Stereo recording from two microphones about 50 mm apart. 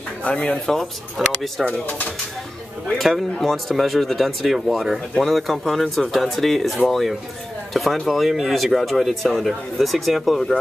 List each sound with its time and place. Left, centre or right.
0.2 s speech: left
0.7 s speech: centre
1.9 s speech: left
3.0 s speech: centre